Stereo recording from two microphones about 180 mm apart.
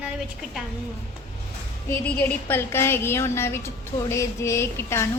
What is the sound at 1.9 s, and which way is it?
A woman's voice, 10° left (ahead or behind).